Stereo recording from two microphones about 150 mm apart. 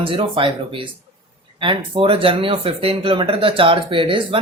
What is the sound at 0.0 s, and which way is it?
Speech, 35° right (ahead or behind).